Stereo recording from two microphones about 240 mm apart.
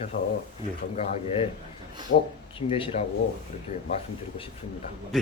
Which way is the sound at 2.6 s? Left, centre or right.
Left.